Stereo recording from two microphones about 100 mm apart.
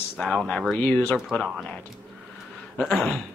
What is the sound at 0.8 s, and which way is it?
Speech, 15° left (ahead or behind).